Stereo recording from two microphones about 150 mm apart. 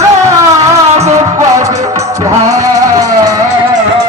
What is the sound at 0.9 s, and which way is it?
Music, 45° right (ahead or behind).